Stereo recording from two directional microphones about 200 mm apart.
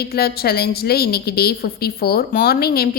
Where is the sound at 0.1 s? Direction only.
50° left (ahead or behind).